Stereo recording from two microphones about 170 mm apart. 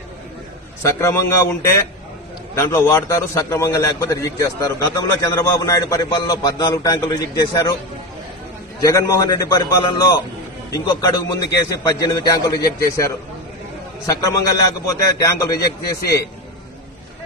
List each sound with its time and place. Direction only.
0.8 s a man's voice: 15° left (ahead or behind)
8.8 s a man's voice: 20° left (ahead or behind)